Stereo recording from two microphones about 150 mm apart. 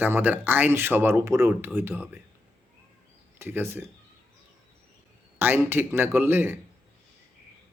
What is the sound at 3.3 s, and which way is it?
Speech, 15° right (ahead or behind).